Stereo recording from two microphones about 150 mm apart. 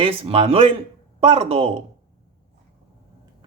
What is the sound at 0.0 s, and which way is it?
Speech, 35° right (ahead or behind).